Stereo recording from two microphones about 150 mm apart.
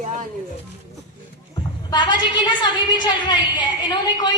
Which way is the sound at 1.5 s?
25° left (ahead or behind).